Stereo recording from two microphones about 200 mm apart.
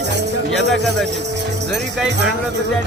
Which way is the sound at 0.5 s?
Centre (ahead or behind).